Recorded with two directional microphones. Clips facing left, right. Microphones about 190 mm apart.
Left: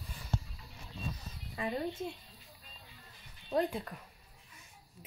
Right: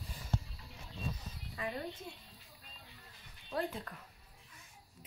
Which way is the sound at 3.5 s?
15° left (ahead or behind).